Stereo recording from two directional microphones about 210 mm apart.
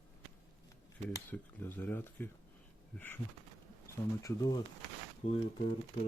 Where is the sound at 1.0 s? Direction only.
10° left (ahead or behind).